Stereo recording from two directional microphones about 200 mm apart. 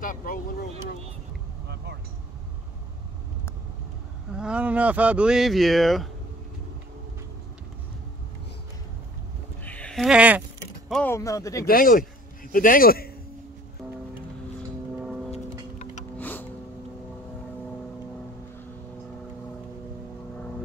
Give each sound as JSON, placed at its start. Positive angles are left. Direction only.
{"t": 0.0, "sound": "vehicle", "side_deg": 45}
{"t": 4.3, "sound": "speech", "side_deg": -5}
{"t": 9.7, "sound": "a sound", "side_deg": 5}
{"t": 10.9, "sound": "speech", "side_deg": 10}
{"t": 11.6, "sound": "a man's voice", "side_deg": 45}
{"t": 16.2, "sound": "music", "side_deg": 10}